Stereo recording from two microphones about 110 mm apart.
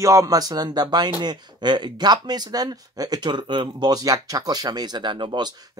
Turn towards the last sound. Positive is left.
turn(degrees=-45)  # may be behind; listen again after turning